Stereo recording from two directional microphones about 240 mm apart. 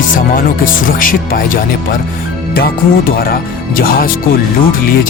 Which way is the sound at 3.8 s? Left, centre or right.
Left.